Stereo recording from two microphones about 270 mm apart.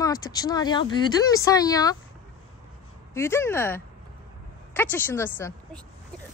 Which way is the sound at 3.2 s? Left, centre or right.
Centre.